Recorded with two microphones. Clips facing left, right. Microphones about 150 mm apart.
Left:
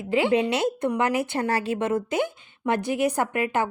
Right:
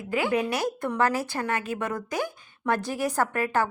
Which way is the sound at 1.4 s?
35° left (ahead or behind).